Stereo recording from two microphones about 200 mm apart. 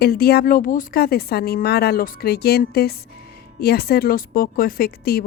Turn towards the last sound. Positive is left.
turn(degrees=50)  # may be behind; listen again after turning